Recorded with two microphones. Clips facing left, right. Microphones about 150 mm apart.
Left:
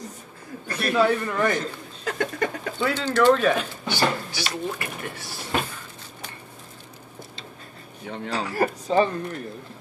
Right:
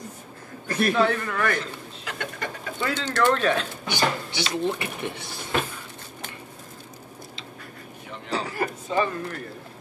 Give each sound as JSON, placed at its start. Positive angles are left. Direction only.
{"t": 0.9, "sound": "a man's voice", "side_deg": 15}
{"t": 2.0, "sound": "a sound", "side_deg": 45}
{"t": 2.8, "sound": "speech", "side_deg": 5}
{"t": 3.8, "sound": "speech", "side_deg": -20}
{"t": 8.1, "sound": "speech", "side_deg": 65}
{"t": 8.5, "sound": "speech", "side_deg": 35}